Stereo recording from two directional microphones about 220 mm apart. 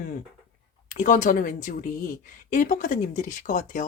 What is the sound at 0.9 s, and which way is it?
A woman's voice, 35° left (ahead or behind).